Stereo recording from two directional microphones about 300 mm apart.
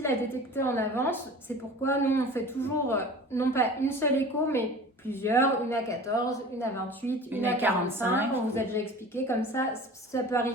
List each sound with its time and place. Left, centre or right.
0.5 s a woman's voice: centre
7.3 s a woman's voice: centre
8.5 s a woman's voice: centre